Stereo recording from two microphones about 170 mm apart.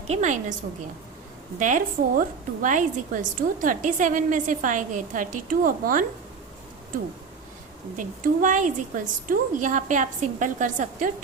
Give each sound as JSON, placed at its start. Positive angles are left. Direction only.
{"t": 0.1, "sound": "a woman's voice", "side_deg": -45}
{"t": 1.5, "sound": "a woman's voice", "side_deg": -50}
{"t": 7.9, "sound": "a woman's voice", "side_deg": -50}